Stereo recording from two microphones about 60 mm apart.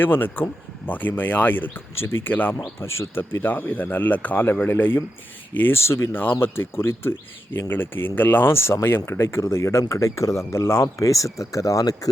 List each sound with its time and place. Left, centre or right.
0.0 s speech: left
2.8 s speech: left
3.2 s speech: left
5.8 s speech: left
6.4 s speech: left
11.0 s speech: left